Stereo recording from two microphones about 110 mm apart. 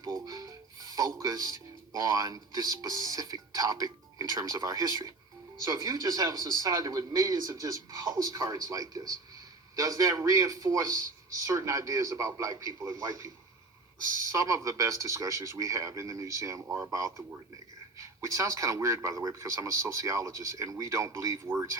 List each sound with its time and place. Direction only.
0.0 s a man's voice: 35° right (ahead or behind)